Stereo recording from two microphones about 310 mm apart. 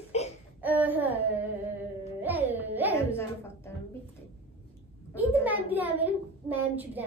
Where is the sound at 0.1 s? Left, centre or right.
Left.